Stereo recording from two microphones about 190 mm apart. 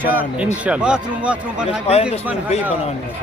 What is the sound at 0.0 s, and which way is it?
A man's voice, 10° right (ahead or behind).